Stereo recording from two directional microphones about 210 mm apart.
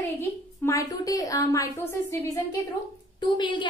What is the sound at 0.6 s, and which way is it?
A woman's voice, 15° left (ahead or behind).